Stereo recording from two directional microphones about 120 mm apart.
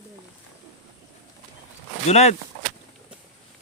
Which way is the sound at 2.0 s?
65° left (ahead or behind).